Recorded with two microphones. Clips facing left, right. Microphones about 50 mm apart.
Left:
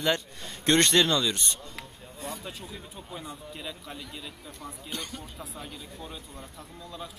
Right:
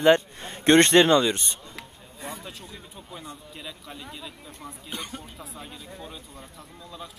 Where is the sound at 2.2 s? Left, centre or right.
Centre.